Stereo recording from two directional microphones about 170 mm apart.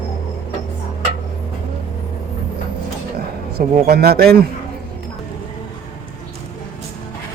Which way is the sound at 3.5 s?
70° right (ahead or behind).